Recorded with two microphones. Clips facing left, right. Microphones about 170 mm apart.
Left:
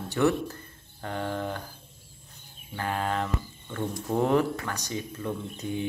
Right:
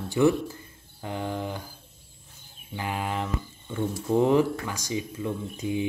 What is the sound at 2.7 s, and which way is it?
Speech, 10° right (ahead or behind).